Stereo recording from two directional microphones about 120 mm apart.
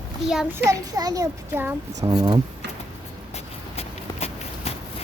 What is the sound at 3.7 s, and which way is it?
Walk, 60° left (ahead or behind).